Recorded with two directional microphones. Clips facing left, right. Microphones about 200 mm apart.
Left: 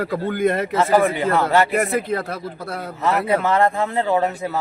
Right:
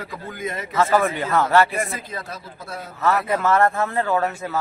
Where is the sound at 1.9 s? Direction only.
60° left (ahead or behind).